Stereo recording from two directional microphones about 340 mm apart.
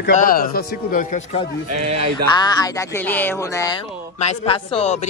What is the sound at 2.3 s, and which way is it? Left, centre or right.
Speech, centre.